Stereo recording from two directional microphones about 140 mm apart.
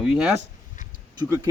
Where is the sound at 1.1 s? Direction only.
20° right (ahead or behind).